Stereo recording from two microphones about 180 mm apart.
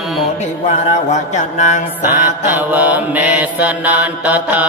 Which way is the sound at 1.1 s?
40° left (ahead or behind).